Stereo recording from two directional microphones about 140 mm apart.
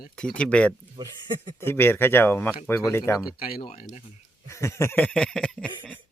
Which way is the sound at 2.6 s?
15° left (ahead or behind).